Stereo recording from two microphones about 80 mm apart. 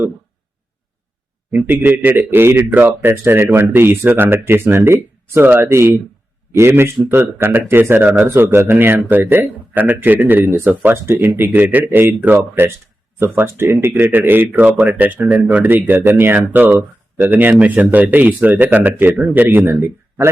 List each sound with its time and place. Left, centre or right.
1.5 s a man's voice: right